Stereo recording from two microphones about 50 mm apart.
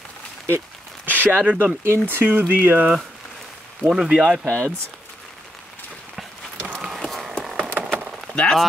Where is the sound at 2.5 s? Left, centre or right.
Right.